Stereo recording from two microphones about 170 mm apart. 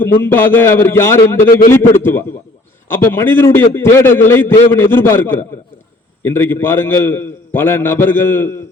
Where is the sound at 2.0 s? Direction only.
10° left (ahead or behind).